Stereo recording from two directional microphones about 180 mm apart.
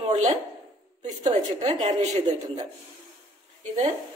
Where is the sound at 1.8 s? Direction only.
40° right (ahead or behind).